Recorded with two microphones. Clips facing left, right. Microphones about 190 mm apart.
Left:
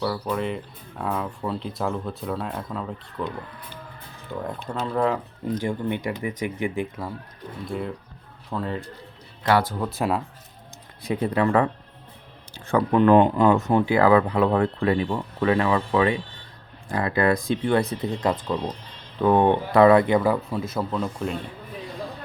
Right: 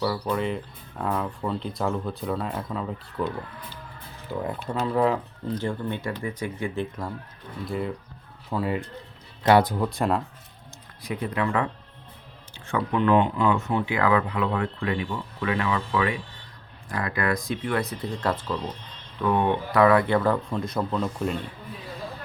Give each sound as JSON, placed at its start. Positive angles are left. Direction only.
{"t": 0.0, "sound": "speech", "side_deg": 0}
{"t": 4.3, "sound": "speech", "side_deg": -5}
{"t": 5.5, "sound": "speech", "side_deg": 15}
{"t": 7.7, "sound": "speech", "side_deg": 0}
{"t": 9.4, "sound": "speech", "side_deg": -20}
{"t": 9.7, "sound": "speech", "side_deg": 0}
{"t": 11.0, "sound": "speech", "side_deg": 30}
{"t": 19.2, "sound": "speech", "side_deg": 35}